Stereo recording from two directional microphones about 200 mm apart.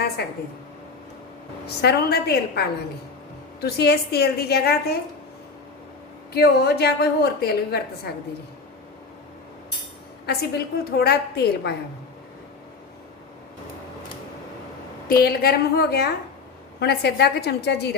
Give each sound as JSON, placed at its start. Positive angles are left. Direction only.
{"t": 1.6, "sound": "a woman's voice", "side_deg": 55}
{"t": 6.3, "sound": "a woman's voice", "side_deg": 55}
{"t": 10.2, "sound": "a woman's voice", "side_deg": 50}
{"t": 15.0, "sound": "a woman's voice", "side_deg": 50}